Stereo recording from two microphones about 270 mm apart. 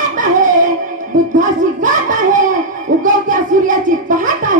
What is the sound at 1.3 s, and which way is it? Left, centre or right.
A child's voice, right.